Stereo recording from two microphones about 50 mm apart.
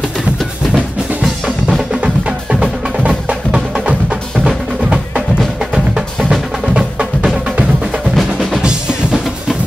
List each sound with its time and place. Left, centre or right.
1.2 s drum: centre
2.6 s music: centre
4.8 s percussion: centre
6.7 s music: centre
8.2 s drum: centre